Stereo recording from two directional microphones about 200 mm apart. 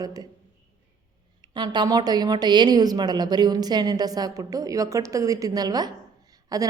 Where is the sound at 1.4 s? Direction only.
20° right (ahead or behind).